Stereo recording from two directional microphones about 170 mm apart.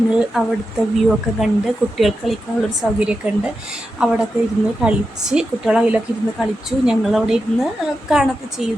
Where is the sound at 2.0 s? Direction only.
Centre (ahead or behind).